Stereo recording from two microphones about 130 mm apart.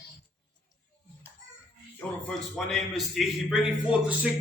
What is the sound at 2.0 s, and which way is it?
A man's voice, 5° left (ahead or behind).